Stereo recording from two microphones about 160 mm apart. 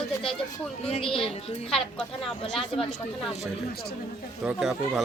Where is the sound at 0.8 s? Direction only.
40° left (ahead or behind).